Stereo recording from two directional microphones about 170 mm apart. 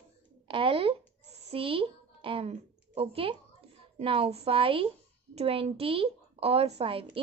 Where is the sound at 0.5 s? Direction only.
30° right (ahead or behind).